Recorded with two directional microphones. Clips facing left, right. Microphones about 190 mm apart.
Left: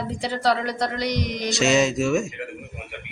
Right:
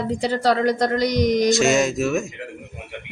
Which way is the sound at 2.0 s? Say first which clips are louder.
Even; 5° right (ahead or behind).